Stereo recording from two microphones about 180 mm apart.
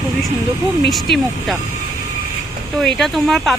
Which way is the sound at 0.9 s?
Centre (ahead or behind).